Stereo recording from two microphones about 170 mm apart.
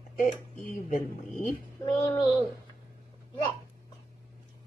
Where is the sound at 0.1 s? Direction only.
50° left (ahead or behind).